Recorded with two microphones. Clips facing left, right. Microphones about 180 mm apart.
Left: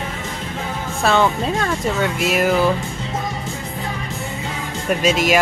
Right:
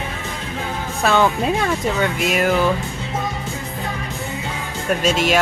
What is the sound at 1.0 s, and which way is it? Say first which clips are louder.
Speech: even; centre (ahead or behind).